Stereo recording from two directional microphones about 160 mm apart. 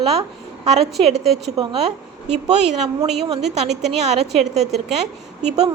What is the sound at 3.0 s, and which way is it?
Speech, 30° right (ahead or behind).